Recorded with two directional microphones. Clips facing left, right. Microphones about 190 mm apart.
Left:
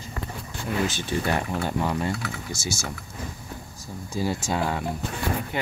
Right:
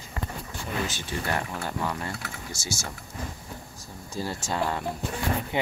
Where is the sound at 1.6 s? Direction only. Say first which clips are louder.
Left 5 dB; 20° left (ahead or behind).